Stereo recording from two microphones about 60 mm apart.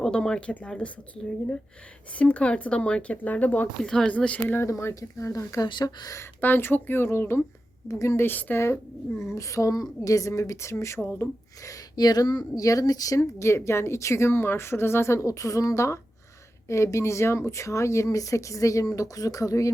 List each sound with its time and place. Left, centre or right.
0.1 s speech: centre
3.8 s speech: centre
4.1 s speech: left
4.6 s speech: left
4.9 s speech: left
6.4 s speech: left
7.9 s speech: left
8.2 s speech: left
8.5 s speech: left
11.6 s speech: left
13.1 s speech: left